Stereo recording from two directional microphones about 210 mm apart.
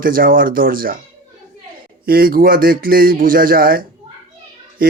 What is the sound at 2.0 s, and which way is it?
Speech, 45° right (ahead or behind).